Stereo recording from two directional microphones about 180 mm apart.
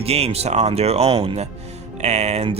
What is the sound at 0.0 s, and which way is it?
Speech, 35° right (ahead or behind).